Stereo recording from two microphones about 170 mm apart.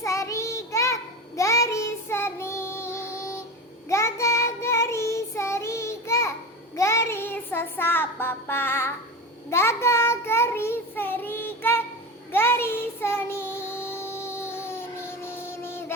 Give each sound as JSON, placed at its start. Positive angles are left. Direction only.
{"t": 0.0, "sound": "child singing", "side_deg": 20}